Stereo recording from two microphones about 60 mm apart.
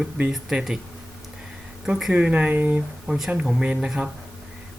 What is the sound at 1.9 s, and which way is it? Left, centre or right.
Speech, centre.